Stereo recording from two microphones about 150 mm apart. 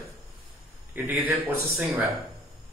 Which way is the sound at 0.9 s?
10° right (ahead or behind).